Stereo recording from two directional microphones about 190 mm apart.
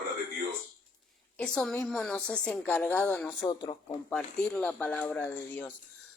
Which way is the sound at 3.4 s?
20° left (ahead or behind).